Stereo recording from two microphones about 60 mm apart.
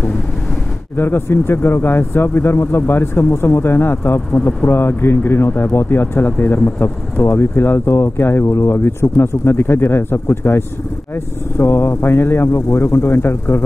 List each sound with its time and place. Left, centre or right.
0.9 s speech: left